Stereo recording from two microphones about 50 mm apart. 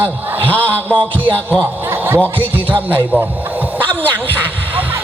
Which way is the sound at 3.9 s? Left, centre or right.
Left.